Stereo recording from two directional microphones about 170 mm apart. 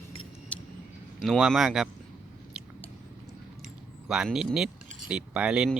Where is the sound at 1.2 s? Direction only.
Centre (ahead or behind).